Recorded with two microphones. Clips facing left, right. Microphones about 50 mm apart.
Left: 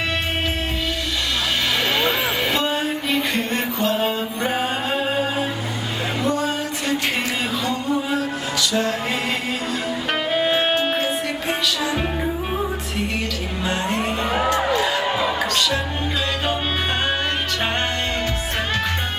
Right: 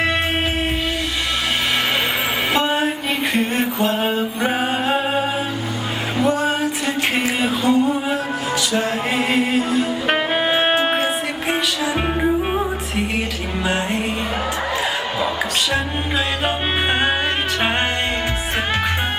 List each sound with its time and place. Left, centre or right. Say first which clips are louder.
2.5 s music: right 3 dB; centre
3.9 s mantra: right 1 dB; centre
4.4 s music: right 2 dB; centre
6.2 s music: right 5 dB; centre
14.7 s music: left 2 dB; centre